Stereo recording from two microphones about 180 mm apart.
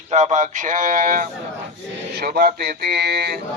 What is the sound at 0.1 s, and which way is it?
A man's voice, 40° right (ahead or behind).